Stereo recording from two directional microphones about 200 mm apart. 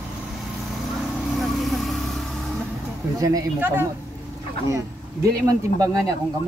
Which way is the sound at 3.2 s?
15° right (ahead or behind).